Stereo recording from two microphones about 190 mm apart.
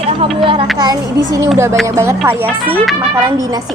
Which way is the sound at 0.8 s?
20° right (ahead or behind).